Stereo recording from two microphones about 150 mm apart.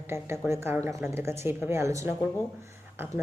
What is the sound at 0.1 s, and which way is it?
A woman's voice, 15° right (ahead or behind).